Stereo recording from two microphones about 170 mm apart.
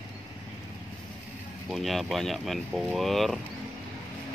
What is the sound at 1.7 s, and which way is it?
Speech, centre (ahead or behind).